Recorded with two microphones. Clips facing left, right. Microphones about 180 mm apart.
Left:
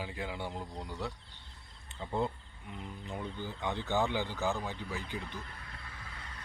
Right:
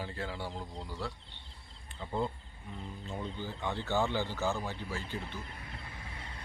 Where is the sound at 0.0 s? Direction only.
15° left (ahead or behind).